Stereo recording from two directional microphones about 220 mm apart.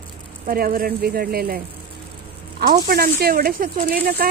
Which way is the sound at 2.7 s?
40° right (ahead or behind).